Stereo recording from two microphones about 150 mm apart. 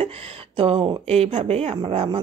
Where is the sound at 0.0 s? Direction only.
40° right (ahead or behind).